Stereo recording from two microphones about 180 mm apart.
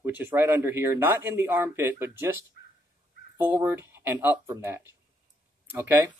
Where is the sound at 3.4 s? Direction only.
10° right (ahead or behind).